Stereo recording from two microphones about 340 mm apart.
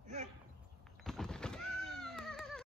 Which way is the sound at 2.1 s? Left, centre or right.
Centre.